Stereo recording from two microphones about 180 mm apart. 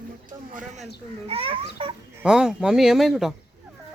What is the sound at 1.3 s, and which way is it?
Children playing, 30° right (ahead or behind).